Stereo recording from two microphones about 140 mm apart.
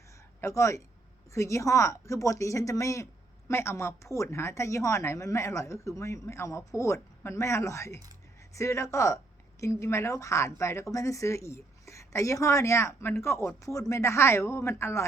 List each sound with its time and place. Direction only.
0.4 s speech: 20° left (ahead or behind)